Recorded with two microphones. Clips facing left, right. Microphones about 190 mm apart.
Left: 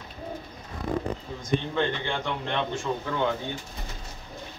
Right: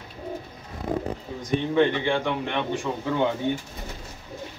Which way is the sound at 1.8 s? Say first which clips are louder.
Right 6 dB; 15° right (ahead or behind).